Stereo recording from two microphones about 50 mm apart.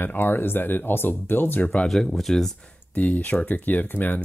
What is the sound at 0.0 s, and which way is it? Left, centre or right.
Speech, left.